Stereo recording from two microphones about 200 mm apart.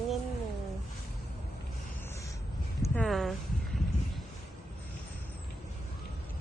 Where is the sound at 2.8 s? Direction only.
5° left (ahead or behind).